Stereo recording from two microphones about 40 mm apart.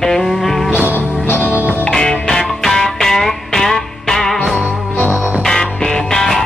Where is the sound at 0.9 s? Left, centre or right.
Left.